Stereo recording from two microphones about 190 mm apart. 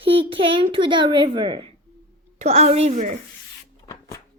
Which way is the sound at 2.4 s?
35° right (ahead or behind).